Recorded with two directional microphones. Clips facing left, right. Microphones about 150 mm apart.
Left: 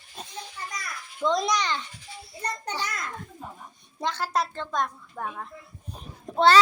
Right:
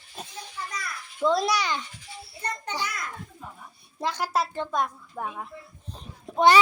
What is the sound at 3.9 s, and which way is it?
A woman's voice, 10° right (ahead or behind).